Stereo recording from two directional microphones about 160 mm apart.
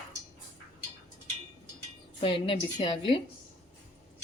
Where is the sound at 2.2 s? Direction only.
35° left (ahead or behind).